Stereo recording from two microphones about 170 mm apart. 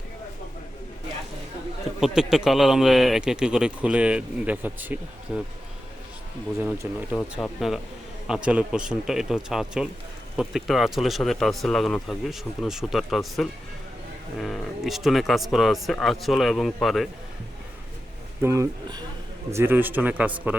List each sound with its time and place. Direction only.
2.0 s a man's voice: 5° right (ahead or behind)
6.6 s speech: 10° right (ahead or behind)
7.2 s a man's voice: 5° left (ahead or behind)
18.4 s speech: 15° right (ahead or behind)